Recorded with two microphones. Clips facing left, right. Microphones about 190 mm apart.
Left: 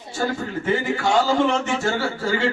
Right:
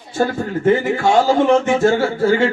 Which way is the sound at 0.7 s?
50° right (ahead or behind).